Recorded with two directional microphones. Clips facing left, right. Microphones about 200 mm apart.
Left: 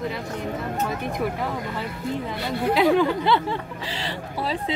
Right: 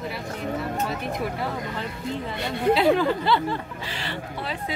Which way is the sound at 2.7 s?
15° left (ahead or behind).